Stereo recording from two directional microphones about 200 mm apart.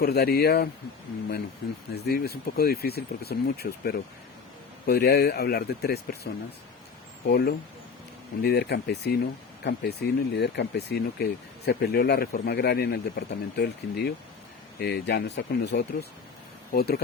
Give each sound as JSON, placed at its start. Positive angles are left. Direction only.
{"t": 0.0, "sound": "speech", "side_deg": 50}
{"t": 1.9, "sound": "speech", "side_deg": 50}
{"t": 7.3, "sound": "speech", "side_deg": 55}